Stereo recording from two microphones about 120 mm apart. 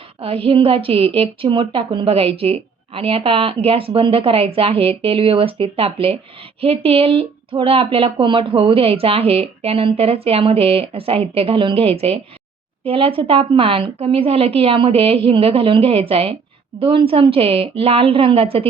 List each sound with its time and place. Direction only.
0.2 s a woman's voice: 50° right (ahead or behind)